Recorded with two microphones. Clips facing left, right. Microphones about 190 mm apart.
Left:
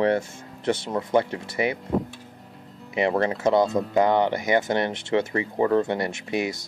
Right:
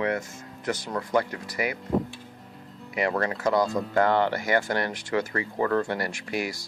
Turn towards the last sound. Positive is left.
turn(degrees=20)  # may be behind; listen again after turning